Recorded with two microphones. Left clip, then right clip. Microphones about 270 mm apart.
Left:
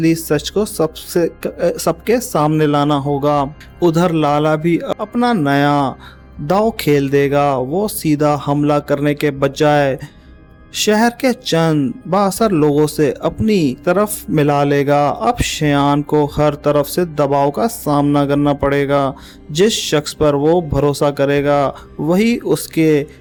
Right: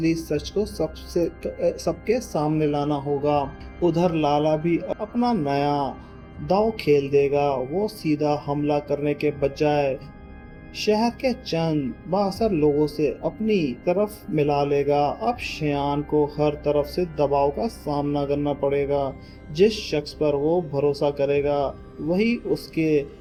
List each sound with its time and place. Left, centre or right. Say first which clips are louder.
0.0 s speech: left 9 dB; left